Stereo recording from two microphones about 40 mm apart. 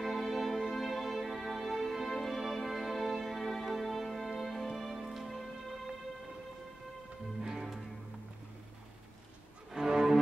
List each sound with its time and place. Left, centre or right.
0.0 s music: centre
4.9 s music: centre
7.4 s music: centre
9.7 s cello: centre